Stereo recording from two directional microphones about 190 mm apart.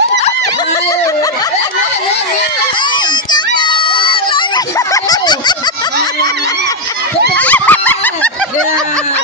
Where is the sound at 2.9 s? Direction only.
25° left (ahead or behind).